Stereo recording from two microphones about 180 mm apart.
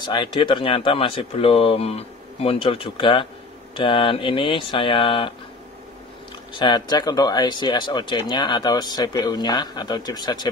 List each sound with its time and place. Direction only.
0.0 s speech: 25° left (ahead or behind)
6.5 s speech: 25° left (ahead or behind)